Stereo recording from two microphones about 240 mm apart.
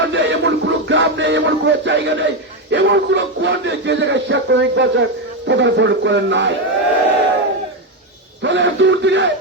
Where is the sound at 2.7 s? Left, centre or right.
Right.